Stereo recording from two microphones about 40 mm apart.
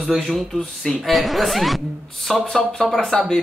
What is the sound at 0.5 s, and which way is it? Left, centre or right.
Speech, centre.